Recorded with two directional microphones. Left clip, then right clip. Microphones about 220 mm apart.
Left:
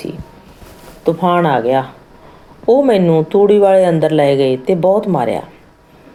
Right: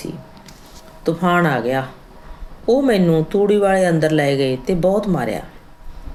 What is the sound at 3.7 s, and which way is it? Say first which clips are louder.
Speech: left 5 dB; 25° right (ahead or behind).